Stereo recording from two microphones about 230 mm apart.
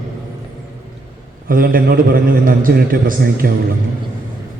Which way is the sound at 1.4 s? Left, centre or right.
Right.